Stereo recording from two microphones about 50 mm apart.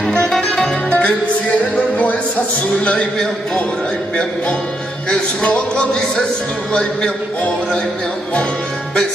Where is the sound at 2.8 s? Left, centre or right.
Centre.